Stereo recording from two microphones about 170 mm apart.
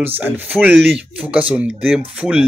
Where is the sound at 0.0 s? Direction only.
10° right (ahead or behind).